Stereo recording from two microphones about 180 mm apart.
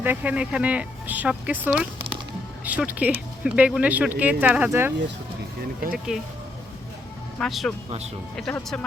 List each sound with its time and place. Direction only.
0.0 s speech: 10° right (ahead or behind)
6.1 s speech: 5° right (ahead or behind)
7.3 s speech: centre (ahead or behind)
7.9 s speech: 35° right (ahead or behind)
8.4 s speech: 5° left (ahead or behind)